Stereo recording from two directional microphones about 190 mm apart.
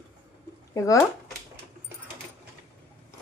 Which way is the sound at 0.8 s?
15° left (ahead or behind).